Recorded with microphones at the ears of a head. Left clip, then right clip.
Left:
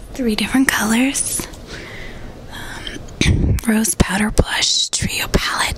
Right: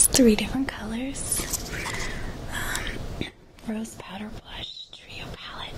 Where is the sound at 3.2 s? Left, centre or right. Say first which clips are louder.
Left 17 dB; left.